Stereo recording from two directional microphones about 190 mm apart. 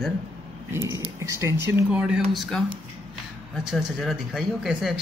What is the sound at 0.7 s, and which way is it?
Speech, 15° right (ahead or behind).